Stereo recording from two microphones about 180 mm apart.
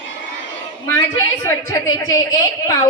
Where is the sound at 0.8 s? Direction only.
15° left (ahead or behind).